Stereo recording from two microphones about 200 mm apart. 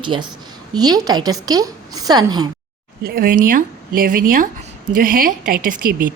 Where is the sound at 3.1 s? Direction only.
45° right (ahead or behind).